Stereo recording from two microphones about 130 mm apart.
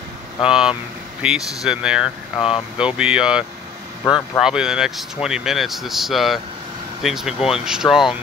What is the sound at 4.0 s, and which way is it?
Speech, 25° left (ahead or behind).